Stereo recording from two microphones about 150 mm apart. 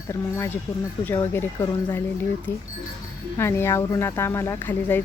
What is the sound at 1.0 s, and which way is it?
Speech, 15° left (ahead or behind).